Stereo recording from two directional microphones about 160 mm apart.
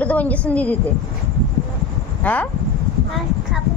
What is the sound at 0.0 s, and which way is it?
Speech, 10° left (ahead or behind).